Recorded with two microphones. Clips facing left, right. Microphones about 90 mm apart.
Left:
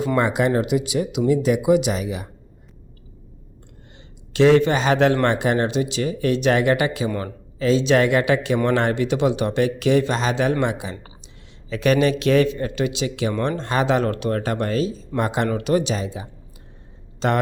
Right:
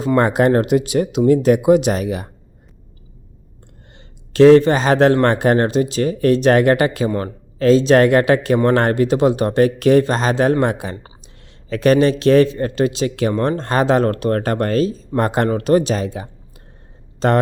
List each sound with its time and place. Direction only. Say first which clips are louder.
0.0 s speech: right 4 dB; 30° right (ahead or behind)
0.3 s speech: right 5 dB; 45° right (ahead or behind)
3.9 s speech: right 6 dB; 40° right (ahead or behind)
17.2 s speech: right 5 dB; 40° right (ahead or behind)